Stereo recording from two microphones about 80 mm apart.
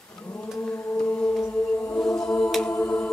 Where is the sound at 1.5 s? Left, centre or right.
Left.